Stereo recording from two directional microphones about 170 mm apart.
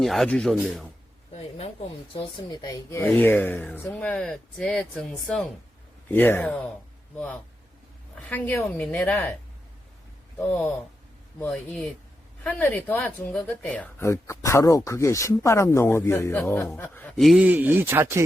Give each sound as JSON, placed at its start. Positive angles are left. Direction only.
{"t": 0.0, "sound": "speech", "side_deg": 0}
{"t": 1.3, "sound": "a sound", "side_deg": 35}
{"t": 2.1, "sound": "speech", "side_deg": 25}
{"t": 8.3, "sound": "speech", "side_deg": 10}
{"t": 10.3, "sound": "speech", "side_deg": 5}